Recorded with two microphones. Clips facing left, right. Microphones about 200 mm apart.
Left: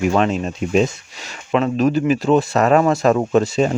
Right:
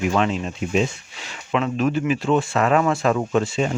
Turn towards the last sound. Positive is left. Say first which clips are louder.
# left 5 dB
turn(degrees=40)  # may be behind; listen again after turning